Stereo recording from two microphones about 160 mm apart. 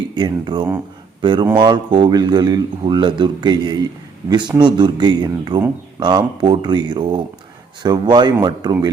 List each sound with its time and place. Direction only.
0.1 s speech: 30° right (ahead or behind)